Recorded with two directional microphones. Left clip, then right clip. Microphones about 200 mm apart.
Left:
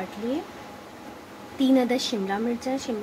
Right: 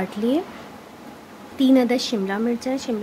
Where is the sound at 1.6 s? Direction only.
40° right (ahead or behind).